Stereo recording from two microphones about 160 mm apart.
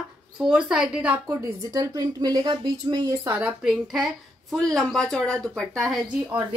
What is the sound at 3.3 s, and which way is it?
A woman's voice, 5° right (ahead or behind).